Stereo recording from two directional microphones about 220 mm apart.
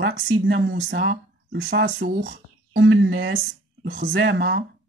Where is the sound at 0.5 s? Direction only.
50° right (ahead or behind).